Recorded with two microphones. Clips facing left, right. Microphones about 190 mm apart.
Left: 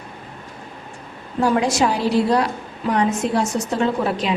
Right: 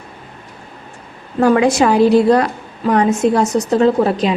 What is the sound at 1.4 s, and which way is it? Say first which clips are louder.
A woman's voice: right 6 dB; 55° right (ahead or behind).